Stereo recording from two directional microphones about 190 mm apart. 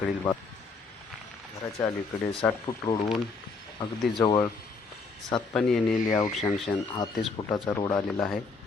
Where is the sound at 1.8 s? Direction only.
25° left (ahead or behind).